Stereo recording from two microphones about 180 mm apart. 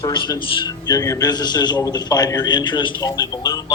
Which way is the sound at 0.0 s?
25° left (ahead or behind).